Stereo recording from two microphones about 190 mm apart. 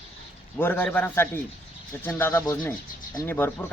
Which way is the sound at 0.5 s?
10° left (ahead or behind).